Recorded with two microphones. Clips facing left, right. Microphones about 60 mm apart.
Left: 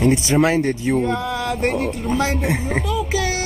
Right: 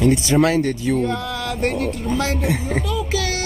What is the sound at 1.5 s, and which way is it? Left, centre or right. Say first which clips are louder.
A child's voice: even; centre.